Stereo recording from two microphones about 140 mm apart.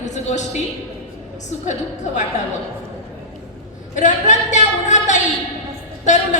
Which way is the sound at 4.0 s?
60° left (ahead or behind).